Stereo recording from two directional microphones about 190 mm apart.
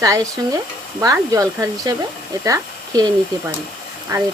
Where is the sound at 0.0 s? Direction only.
15° right (ahead or behind).